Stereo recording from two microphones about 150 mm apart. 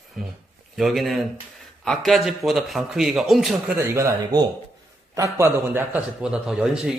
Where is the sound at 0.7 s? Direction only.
Centre (ahead or behind).